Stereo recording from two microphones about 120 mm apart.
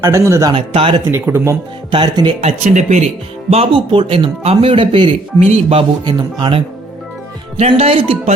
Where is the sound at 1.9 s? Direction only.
40° right (ahead or behind).